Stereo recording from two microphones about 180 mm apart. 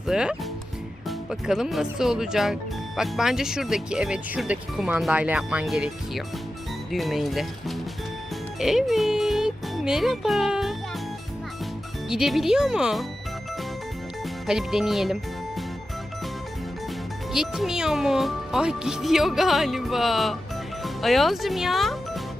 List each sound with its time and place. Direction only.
0.1 s speech: 5° right (ahead or behind)
12.0 s speech: centre (ahead or behind)
14.4 s speech: centre (ahead or behind)
17.3 s speech: centre (ahead or behind)